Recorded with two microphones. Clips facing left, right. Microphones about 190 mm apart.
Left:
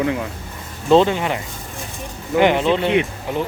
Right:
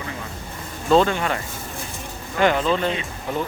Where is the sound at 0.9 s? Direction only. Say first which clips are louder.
Left 3 dB; 20° left (ahead or behind).